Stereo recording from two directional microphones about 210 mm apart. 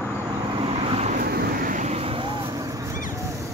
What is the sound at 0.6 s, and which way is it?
Vehicle, 25° right (ahead or behind).